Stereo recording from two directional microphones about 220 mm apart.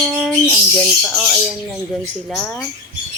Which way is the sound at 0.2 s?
Centre (ahead or behind).